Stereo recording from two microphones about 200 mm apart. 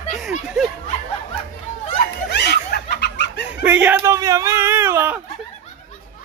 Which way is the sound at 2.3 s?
55° left (ahead or behind).